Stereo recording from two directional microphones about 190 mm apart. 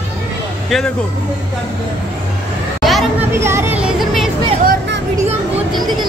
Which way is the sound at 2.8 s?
Centre (ahead or behind).